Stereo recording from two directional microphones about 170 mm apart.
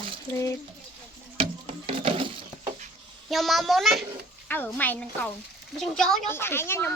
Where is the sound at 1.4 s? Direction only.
35° right (ahead or behind).